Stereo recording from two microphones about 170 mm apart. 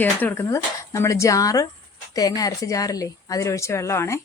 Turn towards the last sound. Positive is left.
turn(degrees=15)  # may be behind; listen again after turning